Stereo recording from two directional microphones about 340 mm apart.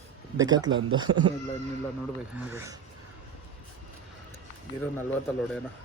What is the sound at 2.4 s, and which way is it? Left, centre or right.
Speech, centre.